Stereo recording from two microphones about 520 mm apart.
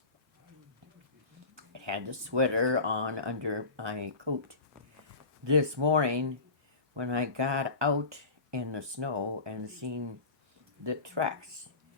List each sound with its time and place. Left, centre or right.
1.5 s speech: right